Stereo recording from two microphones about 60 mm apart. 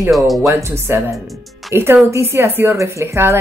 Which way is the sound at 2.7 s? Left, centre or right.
Right.